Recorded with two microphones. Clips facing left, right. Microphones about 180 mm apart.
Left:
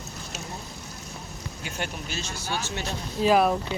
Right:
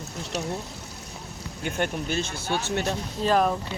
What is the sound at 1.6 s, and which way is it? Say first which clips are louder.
Speech: right 7 dB; 55° right (ahead or behind).